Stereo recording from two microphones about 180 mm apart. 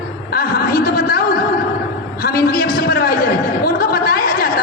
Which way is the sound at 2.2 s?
55° left (ahead or behind).